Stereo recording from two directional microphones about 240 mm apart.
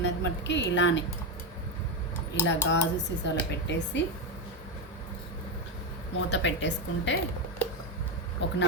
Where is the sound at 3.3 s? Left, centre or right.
Left.